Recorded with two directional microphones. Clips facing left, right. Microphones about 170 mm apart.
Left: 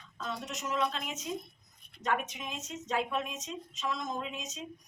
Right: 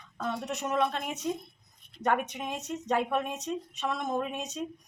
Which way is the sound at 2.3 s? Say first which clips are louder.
Right 6 dB; 60° right (ahead or behind).